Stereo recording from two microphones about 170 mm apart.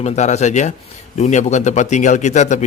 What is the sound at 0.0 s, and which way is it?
A man's voice, 40° left (ahead or behind).